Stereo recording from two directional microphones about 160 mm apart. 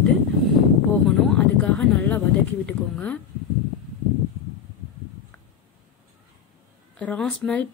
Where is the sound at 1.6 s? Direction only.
10° left (ahead or behind).